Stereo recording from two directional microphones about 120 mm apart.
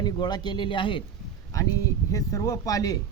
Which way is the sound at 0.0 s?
35° left (ahead or behind).